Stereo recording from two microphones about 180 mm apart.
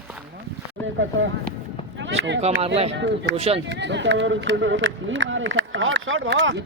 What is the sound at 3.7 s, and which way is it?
Speech, 75° right (ahead or behind).